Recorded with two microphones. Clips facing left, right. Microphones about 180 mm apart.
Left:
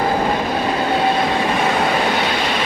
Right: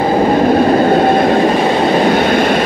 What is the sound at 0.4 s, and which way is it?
Train, 50° right (ahead or behind).